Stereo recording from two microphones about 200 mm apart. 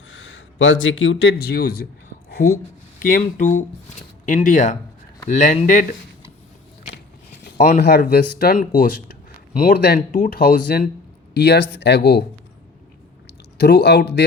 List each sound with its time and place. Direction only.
0.1 s speech: 70° left (ahead or behind); by 5.8 s 40° left (ahead or behind)
7.8 s speech: 55° left (ahead or behind)
11.3 s speech: 60° left (ahead or behind)
13.6 s speech: 55° left (ahead or behind)